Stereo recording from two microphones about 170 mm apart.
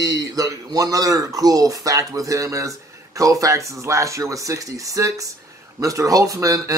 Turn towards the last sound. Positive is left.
turn(degrees=-20)  # may be behind; listen again after turning